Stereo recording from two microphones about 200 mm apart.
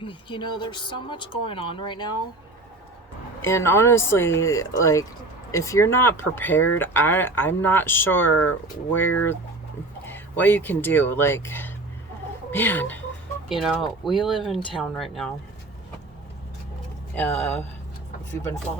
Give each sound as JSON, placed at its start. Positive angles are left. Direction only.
{"t": 0.0, "sound": "speech", "side_deg": 25}
{"t": 3.4, "sound": "speech", "side_deg": 15}